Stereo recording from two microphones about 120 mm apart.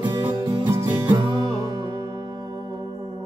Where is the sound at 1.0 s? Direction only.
45° right (ahead or behind).